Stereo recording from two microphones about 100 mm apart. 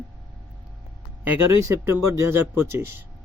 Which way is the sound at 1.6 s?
25° right (ahead or behind).